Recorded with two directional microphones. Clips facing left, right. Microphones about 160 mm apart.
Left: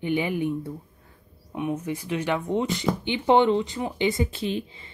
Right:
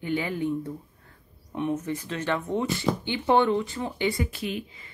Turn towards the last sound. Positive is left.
turn(degrees=30)  # may be behind; listen again after turning